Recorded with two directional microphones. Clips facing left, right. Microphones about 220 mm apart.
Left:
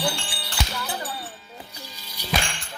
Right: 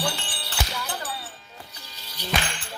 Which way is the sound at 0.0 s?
10° left (ahead or behind).